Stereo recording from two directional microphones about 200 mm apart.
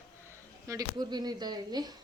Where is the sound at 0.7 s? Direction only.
20° right (ahead or behind).